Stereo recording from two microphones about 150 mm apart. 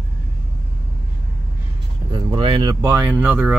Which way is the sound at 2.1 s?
35° right (ahead or behind).